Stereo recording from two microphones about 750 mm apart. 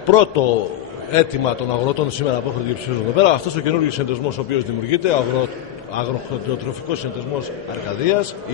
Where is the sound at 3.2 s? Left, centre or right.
Left.